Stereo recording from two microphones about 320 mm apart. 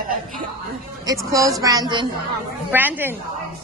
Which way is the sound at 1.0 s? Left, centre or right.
Centre.